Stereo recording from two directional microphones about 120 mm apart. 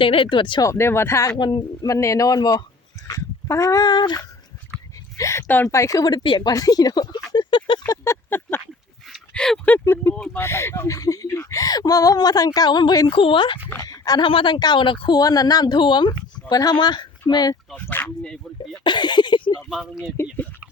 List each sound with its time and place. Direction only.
0.0 s speech: 45° left (ahead or behind)
0.6 s speech: 20° left (ahead or behind)
1.4 s a woman's voice: 40° left (ahead or behind)
1.9 s a woman's voice: 25° left (ahead or behind)
5.1 s a woman's voice: 25° left (ahead or behind)
7.9 s a sound: 20° left (ahead or behind)
9.0 s a sound: 5° left (ahead or behind)
9.8 s speech: 20° left (ahead or behind); by 13.6 s 45° left (ahead or behind)
13.8 s speech: 30° left (ahead or behind)
14.3 s a woman's voice: 45° left (ahead or behind)
17.7 s speech: 15° left (ahead or behind)
18.8 s a woman's voice: 40° left (ahead or behind)
19.7 s speech: 5° right (ahead or behind)